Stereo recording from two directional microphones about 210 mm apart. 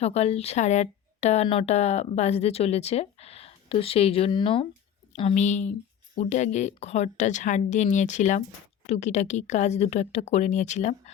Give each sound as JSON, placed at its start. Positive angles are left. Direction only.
{"t": 0.0, "sound": "speech", "side_deg": 30}